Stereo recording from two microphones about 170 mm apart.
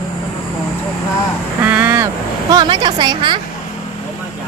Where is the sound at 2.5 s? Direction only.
25° right (ahead or behind).